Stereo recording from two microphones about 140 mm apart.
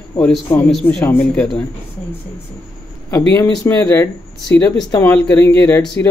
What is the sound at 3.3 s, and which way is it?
Speech, 15° left (ahead or behind).